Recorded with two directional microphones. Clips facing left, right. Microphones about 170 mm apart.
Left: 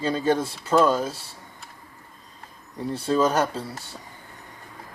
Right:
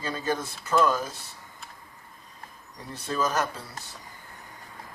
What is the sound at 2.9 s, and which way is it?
Speech, 30° left (ahead or behind).